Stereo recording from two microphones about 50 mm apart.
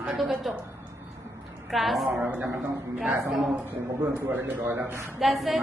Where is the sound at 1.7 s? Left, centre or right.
Centre.